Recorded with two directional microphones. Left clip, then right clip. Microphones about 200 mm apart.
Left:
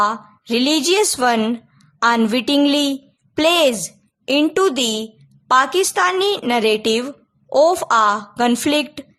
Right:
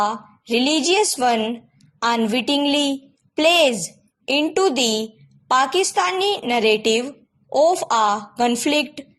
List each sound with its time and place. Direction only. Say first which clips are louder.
0.0 s a woman's voice: left 4 dB; 15° left (ahead or behind)